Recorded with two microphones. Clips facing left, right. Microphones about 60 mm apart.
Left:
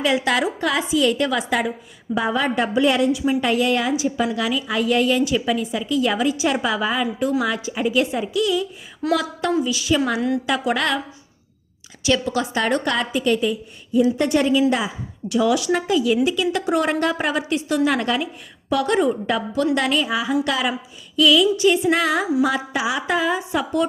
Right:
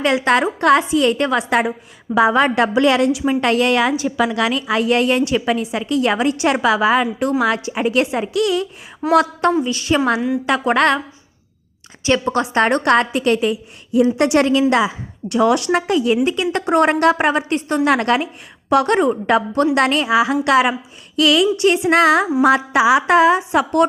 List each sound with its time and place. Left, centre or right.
0.3 s a woman's voice: right
2.3 s a woman's voice: right
9.0 s speech: centre
9.6 s a woman's voice: right
10.2 s a woman's voice: centre
10.4 s a woman's voice: right
12.0 s a woman's voice: right
14.7 s a woman's voice: right
15.3 s a woman's voice: right
17.8 s a woman's voice: right